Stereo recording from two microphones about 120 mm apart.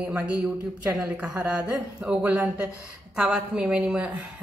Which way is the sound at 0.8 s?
15° right (ahead or behind).